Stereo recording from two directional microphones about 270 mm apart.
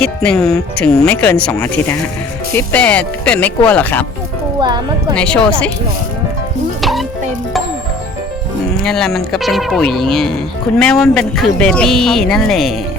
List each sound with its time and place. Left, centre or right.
0.0 s speech: centre
4.6 s a woman's voice: centre
5.1 s speech: centre
8.8 s speech: centre